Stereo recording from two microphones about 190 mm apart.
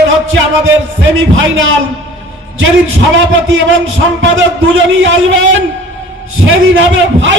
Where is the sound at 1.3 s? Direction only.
90° right.